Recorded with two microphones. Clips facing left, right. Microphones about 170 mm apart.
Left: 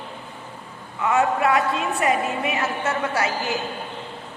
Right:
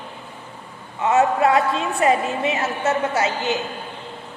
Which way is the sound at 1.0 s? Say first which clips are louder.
Right 3 dB; 25° right (ahead or behind).